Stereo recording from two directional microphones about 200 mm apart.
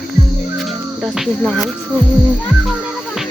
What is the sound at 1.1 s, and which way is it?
Speech, centre (ahead or behind).